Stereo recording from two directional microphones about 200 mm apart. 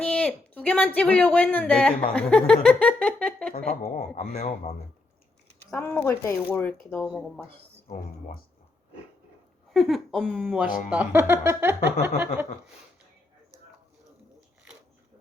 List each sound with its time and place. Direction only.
0.0 s a man's voice: 5° left (ahead or behind)
2.6 s giggle: 5° left (ahead or behind)
3.7 s a woman's voice: 35° left (ahead or behind)
5.7 s speech: 10° left (ahead or behind)
9.7 s speech: centre (ahead or behind)